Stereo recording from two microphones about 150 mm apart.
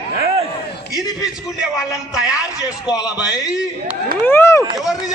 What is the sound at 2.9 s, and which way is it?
Speech, 25° left (ahead or behind).